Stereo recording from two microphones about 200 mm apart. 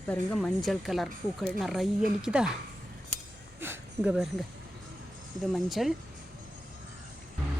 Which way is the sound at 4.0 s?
Centre (ahead or behind).